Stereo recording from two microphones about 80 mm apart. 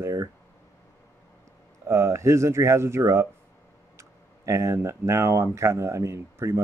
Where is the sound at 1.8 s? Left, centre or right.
Right.